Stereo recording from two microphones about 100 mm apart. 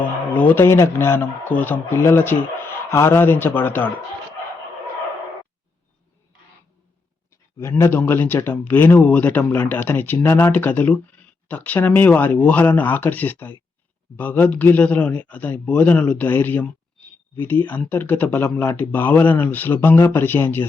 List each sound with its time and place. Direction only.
0.0 s speech: 15° left (ahead or behind)
7.6 s speech: 25° left (ahead or behind)